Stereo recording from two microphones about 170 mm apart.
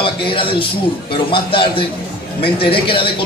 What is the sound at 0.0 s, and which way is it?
A man's voice, 30° left (ahead or behind).